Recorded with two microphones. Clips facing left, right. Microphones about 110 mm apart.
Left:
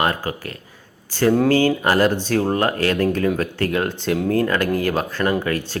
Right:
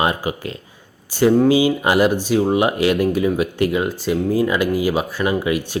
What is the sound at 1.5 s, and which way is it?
Speech, 15° right (ahead or behind).